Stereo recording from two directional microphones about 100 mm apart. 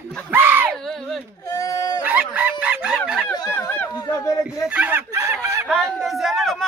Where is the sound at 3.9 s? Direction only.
40° left (ahead or behind).